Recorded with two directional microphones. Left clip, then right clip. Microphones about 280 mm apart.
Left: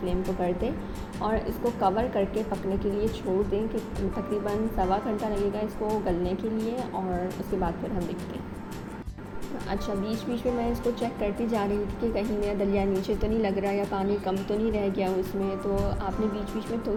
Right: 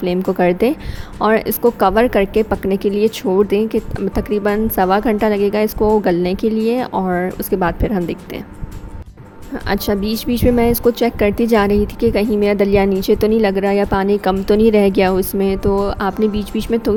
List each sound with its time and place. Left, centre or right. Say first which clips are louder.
0.0 s a woman's voice: right 13 dB; right
9.6 s a woman's voice: right 13 dB; right